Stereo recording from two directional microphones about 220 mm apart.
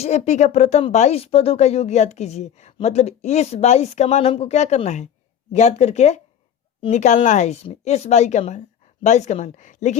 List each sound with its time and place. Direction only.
0.0 s speech: 30° left (ahead or behind)